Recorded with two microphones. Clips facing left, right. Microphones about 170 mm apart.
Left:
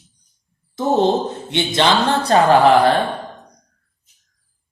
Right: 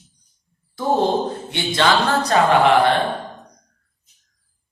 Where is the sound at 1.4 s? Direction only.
20° left (ahead or behind).